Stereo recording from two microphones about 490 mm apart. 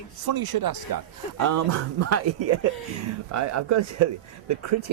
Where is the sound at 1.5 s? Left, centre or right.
Right.